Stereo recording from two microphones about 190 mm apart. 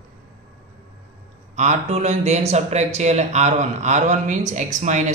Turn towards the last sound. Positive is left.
turn(degrees=-40)  # may be behind; listen again after turning